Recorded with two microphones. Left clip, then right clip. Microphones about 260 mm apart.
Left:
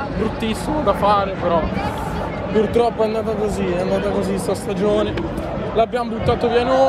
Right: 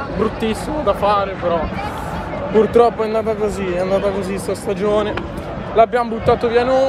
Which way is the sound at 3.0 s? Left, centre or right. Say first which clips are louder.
Right 1 dB; centre.